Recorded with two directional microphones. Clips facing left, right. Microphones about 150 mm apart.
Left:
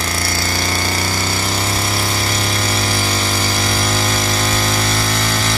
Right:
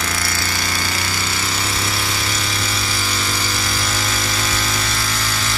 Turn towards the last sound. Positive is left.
turn(degrees=55)  # may be behind; listen again after turning